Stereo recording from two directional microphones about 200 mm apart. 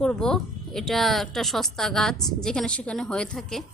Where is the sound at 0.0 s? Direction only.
5° left (ahead or behind).